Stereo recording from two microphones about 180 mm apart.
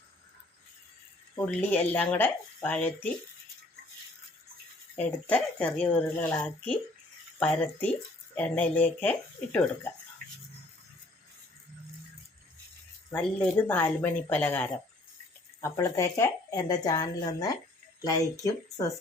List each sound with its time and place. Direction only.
1.7 s speech: 10° left (ahead or behind)
4.9 s speech: 10° left (ahead or behind)
13.1 s speech: 10° left (ahead or behind)